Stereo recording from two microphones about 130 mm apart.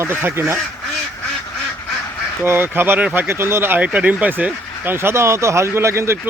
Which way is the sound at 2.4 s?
20° right (ahead or behind).